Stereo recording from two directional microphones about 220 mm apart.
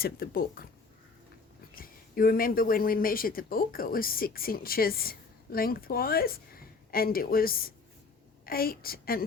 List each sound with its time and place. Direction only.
0.0 s a woman's voice: 40° left (ahead or behind)
1.7 s a woman's voice: 40° left (ahead or behind)